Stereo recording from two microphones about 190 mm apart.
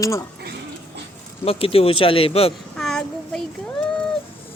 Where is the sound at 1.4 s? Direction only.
30° left (ahead or behind).